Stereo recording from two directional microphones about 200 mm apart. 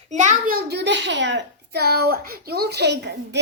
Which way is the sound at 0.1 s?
40° right (ahead or behind).